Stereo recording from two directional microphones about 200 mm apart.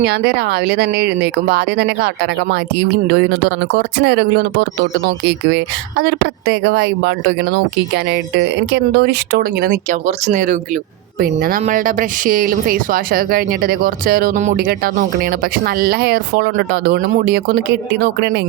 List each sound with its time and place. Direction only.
0.0 s speech: 55° right (ahead or behind)
10.1 s speech: 35° right (ahead or behind); by 18.3 s 55° right (ahead or behind)